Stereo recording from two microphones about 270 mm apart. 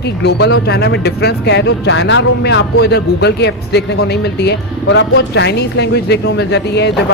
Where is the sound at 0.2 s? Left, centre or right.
Left.